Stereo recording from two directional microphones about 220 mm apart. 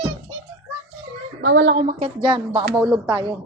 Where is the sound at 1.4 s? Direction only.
50° right (ahead or behind).